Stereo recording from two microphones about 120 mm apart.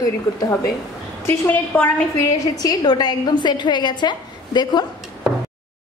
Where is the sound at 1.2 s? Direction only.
15° left (ahead or behind).